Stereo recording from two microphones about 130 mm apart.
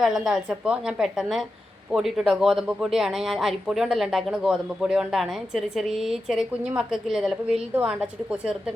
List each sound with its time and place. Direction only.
0.0 s a woman's voice: centre (ahead or behind)